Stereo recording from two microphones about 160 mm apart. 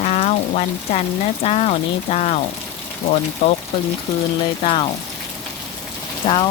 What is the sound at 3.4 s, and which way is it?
Speech, 40° left (ahead or behind).